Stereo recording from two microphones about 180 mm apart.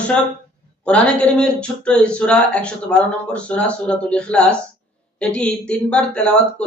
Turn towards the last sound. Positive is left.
turn(degrees=5)  # may be behind; listen again after turning